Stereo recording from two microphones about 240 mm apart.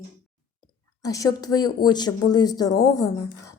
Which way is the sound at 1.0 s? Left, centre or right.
Centre.